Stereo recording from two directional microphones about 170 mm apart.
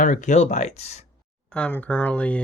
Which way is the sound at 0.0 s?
45° left (ahead or behind).